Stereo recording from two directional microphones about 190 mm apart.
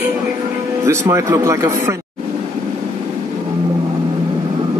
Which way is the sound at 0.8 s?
15° right (ahead or behind).